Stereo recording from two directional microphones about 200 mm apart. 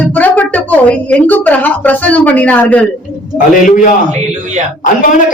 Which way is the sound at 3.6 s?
40° left (ahead or behind).